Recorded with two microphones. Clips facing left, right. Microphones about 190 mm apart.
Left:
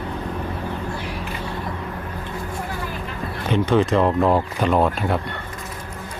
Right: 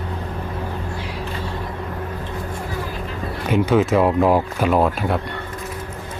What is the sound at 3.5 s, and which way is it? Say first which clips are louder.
Speech: right 1 dB; 5° right (ahead or behind).